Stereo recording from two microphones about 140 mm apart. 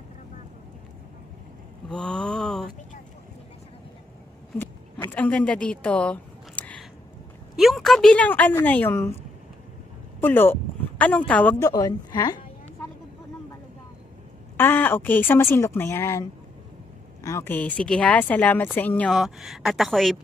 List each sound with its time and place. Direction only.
1.9 s a sound: 5° left (ahead or behind)
4.6 s a sound: 15° left (ahead or behind)
7.5 s a woman's voice: centre (ahead or behind); by 9.1 s 15° left (ahead or behind)
10.2 s speech: 15° left (ahead or behind)
11.7 s a woman's voice: 25° left (ahead or behind)
14.6 s a woman's voice: 15° left (ahead or behind)
19.0 s speech: centre (ahead or behind)